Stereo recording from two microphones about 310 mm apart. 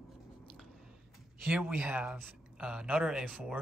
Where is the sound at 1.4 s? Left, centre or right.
Centre.